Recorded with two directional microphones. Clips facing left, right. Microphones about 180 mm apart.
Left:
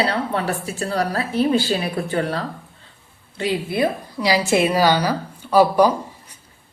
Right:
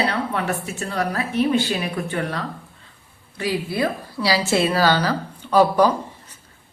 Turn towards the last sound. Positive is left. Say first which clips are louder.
# left 1 dB
turn(degrees=10)  # may be behind; listen again after turning